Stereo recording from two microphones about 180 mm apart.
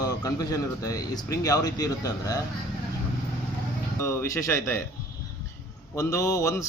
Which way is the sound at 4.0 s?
15° left (ahead or behind).